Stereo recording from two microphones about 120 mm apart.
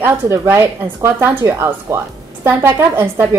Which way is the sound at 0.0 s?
25° right (ahead or behind).